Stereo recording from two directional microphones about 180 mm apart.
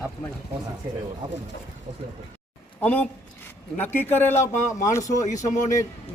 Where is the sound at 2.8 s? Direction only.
10° left (ahead or behind).